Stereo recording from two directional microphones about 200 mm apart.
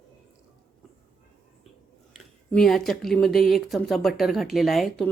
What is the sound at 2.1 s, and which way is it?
Speech, centre (ahead or behind).